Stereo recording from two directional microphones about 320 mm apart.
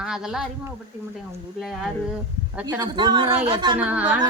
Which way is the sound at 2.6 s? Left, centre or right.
Centre.